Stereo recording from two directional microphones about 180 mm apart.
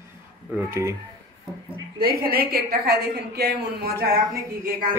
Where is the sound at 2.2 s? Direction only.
60° right (ahead or behind).